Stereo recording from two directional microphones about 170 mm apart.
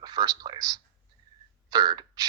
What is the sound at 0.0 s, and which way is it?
Speech, 25° right (ahead or behind).